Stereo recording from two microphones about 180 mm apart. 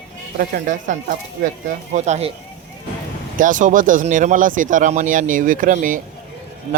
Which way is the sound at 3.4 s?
45° right (ahead or behind).